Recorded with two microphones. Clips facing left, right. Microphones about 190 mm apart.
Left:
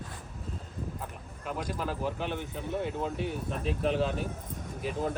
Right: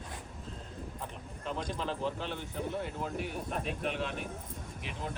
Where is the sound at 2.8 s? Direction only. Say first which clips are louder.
Left 4 dB; 25° left (ahead or behind).